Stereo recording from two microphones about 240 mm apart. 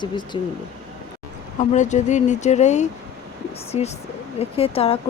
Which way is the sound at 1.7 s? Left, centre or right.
Left.